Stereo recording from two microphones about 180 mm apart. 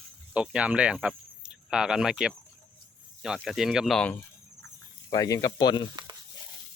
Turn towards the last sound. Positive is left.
turn(degrees=25)  # may be behind; listen again after turning